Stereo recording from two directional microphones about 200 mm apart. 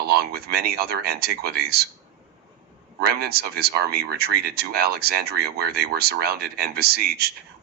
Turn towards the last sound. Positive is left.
turn(degrees=-50)  # may be behind; listen again after turning